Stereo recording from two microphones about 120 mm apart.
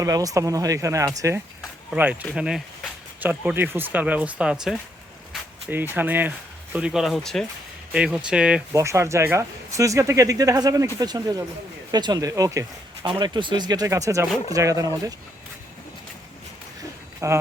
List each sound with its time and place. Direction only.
0.0 s speech: 30° right (ahead or behind)
1.9 s speech: 10° right (ahead or behind)
5.6 s speech: 15° right (ahead or behind); by 7.4 s 5° left (ahead or behind)
7.9 s speech: 10° right (ahead or behind)
8.7 s speech: 25° right (ahead or behind)
13.1 s speech: 40° right (ahead or behind)
17.2 s speech: 25° right (ahead or behind)